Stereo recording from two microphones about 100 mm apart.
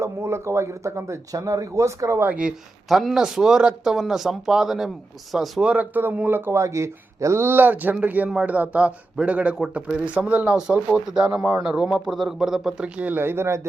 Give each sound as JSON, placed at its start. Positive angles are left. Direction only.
{"t": 0.0, "sound": "speech", "side_deg": -25}
{"t": 2.2, "sound": "speech", "side_deg": -15}
{"t": 2.9, "sound": "speech", "side_deg": 0}